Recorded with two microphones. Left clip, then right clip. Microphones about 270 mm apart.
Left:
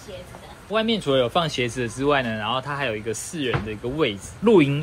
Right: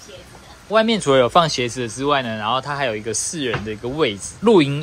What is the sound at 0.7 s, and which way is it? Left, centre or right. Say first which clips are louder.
Speech: right 6 dB; right.